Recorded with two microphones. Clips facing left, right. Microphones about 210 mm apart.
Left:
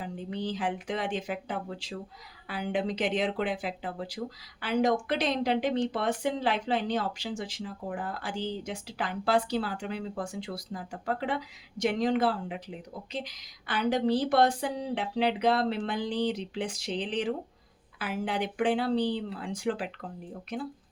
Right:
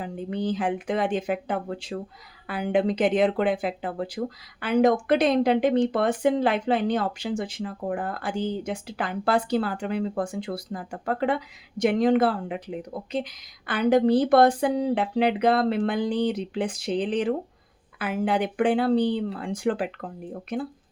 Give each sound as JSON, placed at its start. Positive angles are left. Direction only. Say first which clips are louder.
{"t": 0.0, "sound": "speech", "louder": "right 6 dB", "side_deg": -55}